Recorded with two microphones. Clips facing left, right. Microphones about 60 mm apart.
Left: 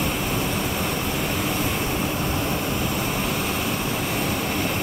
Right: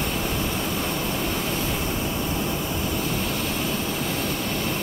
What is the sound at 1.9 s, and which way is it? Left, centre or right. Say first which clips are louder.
Vehicle: left 2 dB; left.